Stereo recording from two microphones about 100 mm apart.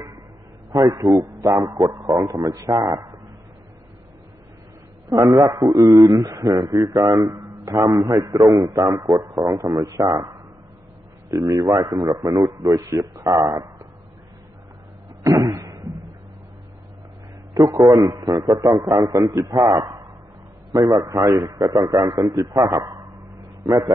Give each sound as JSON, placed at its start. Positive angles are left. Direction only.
{"t": 0.7, "sound": "a man's voice", "side_deg": -40}
{"t": 5.2, "sound": "a man's voice", "side_deg": 0}
{"t": 5.5, "sound": "a man's voice", "side_deg": -35}
{"t": 15.2, "sound": "a sound", "side_deg": -35}
{"t": 17.6, "sound": "a man's voice", "side_deg": -35}